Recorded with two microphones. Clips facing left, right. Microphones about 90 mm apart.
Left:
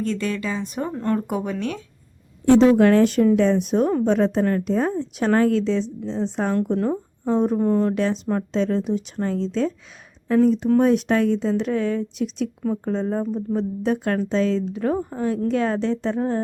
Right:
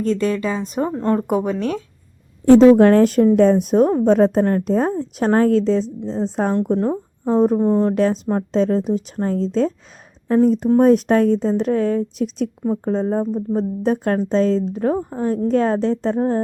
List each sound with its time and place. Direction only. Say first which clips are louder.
0.0 s a woman's voice: right 5 dB; 35° right (ahead or behind)
7.9 s a woman's voice: right 4 dB; 40° right (ahead or behind)